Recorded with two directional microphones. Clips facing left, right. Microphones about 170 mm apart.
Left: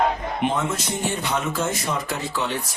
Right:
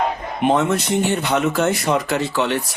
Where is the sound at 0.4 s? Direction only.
65° right (ahead or behind).